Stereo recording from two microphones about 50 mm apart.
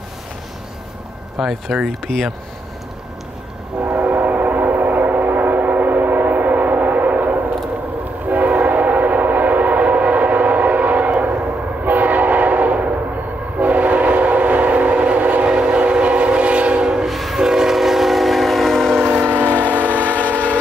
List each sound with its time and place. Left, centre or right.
1.4 s speech: centre
4.0 s train: right
17.1 s train: centre
18.9 s train: right
20.1 s train: left